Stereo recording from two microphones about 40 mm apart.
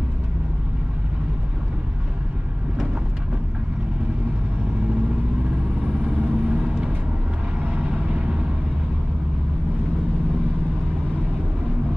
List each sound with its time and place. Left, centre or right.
6.0 s vehicle: right